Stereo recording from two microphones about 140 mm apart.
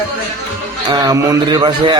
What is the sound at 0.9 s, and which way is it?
A man's voice, 25° right (ahead or behind).